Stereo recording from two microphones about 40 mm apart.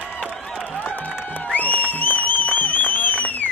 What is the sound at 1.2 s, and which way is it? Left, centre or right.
Music, left.